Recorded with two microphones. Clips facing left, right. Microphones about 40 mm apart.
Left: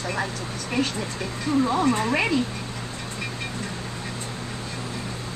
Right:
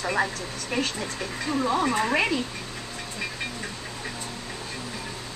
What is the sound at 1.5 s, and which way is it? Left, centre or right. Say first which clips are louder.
Speech: left 3 dB; centre.